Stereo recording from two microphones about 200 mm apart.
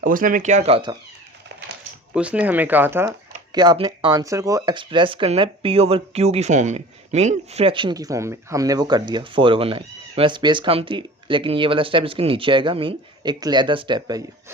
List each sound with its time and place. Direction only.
0.0 s speech: 45° right (ahead or behind); by 0.9 s 25° right (ahead or behind)
2.1 s speech: 5° right (ahead or behind)